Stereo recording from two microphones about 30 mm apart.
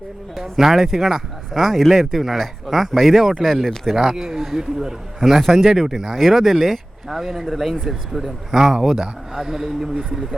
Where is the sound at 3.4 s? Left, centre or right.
Centre.